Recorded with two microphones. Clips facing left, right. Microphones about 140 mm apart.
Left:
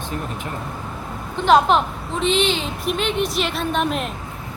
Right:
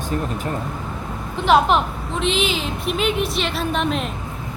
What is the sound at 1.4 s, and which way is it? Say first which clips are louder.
Speech: left 1 dB; centre (ahead or behind).